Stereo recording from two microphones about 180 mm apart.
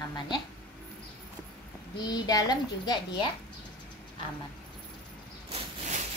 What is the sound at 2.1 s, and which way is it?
A child's voice, 20° left (ahead or behind).